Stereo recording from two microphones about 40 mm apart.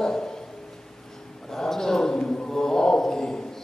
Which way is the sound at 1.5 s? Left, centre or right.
Centre.